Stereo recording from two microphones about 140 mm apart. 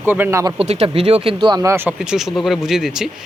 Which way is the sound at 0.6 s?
45° right (ahead or behind).